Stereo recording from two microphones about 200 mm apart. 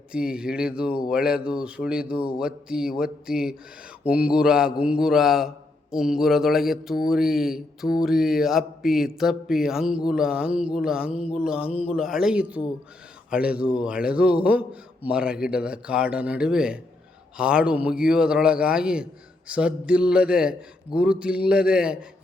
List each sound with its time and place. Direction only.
0.1 s a man's voice: 5° right (ahead or behind)